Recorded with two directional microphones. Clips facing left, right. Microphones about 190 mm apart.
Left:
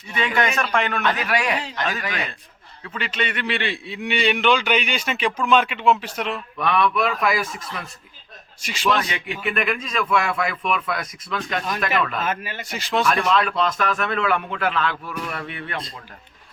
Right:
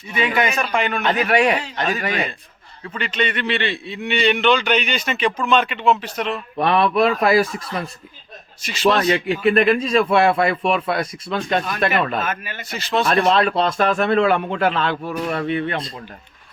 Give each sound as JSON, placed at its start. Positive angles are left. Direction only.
{"t": 0.1, "sound": "a man's voice", "side_deg": -5}
{"t": 1.0, "sound": "speech", "side_deg": -25}
{"t": 2.9, "sound": "a man's voice", "side_deg": 5}
{"t": 6.6, "sound": "a man's voice", "side_deg": -35}
{"t": 8.9, "sound": "a man's voice", "side_deg": -35}
{"t": 12.2, "sound": "speech", "side_deg": 30}
{"t": 12.6, "sound": "a man's voice", "side_deg": 15}
{"t": 13.1, "sound": "a man's voice", "side_deg": -35}